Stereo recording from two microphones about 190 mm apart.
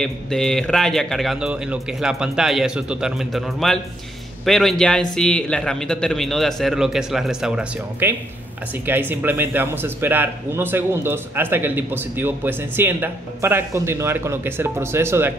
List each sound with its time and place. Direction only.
0.0 s a man's voice: centre (ahead or behind)